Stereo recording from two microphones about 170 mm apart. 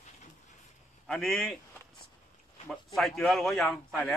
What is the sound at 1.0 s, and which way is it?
Speech, centre (ahead or behind).